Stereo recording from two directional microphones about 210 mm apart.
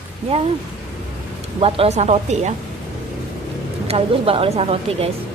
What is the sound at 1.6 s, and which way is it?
Speech, 25° right (ahead or behind).